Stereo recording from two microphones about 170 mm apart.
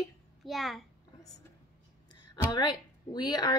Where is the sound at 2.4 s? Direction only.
25° left (ahead or behind).